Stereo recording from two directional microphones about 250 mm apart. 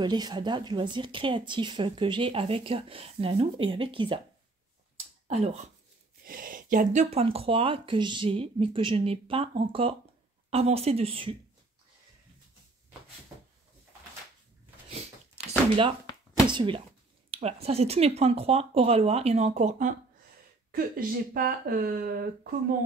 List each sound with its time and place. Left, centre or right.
0.0 s speech: centre
5.3 s speech: right
14.9 s a sound: right
16.4 s speech: centre; by 22.5 s right